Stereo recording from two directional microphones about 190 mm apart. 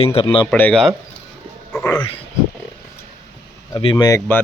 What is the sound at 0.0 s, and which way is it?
Speech, 30° left (ahead or behind).